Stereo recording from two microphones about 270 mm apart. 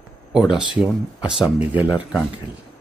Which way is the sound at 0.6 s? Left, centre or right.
Centre.